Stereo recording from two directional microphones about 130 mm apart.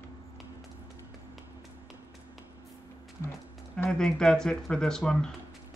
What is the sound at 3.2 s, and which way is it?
Music, 15° left (ahead or behind).